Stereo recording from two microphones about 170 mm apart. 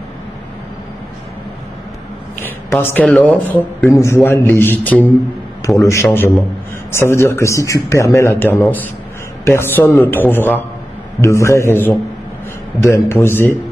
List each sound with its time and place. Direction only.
2.4 s a woman's voice: 10° left (ahead or behind)